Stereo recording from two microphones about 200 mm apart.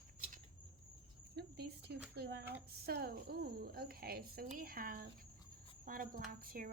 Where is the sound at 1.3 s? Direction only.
55° right (ahead or behind).